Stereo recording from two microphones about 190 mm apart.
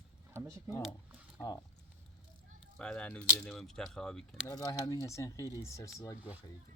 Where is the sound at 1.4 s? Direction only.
20° left (ahead or behind).